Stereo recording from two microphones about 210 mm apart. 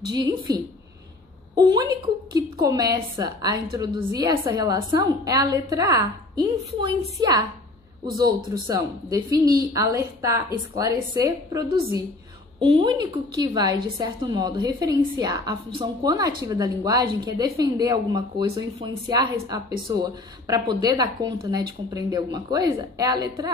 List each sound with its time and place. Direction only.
0.1 s a woman's voice: 20° right (ahead or behind)